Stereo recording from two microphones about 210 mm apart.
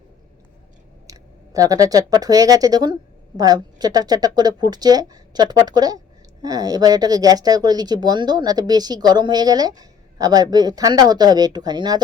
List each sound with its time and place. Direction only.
1.0 s speech: 15° right (ahead or behind)